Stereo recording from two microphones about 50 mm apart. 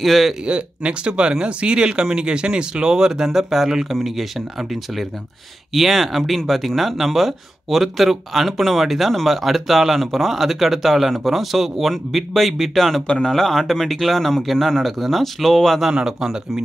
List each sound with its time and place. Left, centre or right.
0.0 s speech: centre
0.5 s speech: right; by 4.3 s centre
5.8 s speech: centre
15.8 s speech: centre